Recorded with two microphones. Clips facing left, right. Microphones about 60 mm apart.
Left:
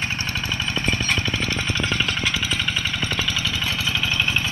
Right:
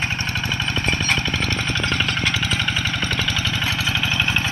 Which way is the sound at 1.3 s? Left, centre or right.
Centre.